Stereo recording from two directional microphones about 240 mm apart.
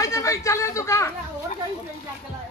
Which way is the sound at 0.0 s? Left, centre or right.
Centre.